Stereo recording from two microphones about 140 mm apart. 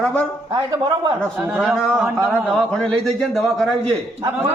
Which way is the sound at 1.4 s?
10° right (ahead or behind).